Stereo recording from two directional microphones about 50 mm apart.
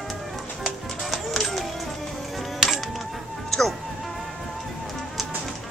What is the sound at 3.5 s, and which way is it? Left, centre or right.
Music, centre.